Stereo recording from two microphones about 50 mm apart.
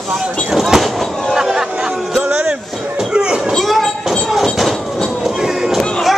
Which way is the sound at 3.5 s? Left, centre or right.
Centre.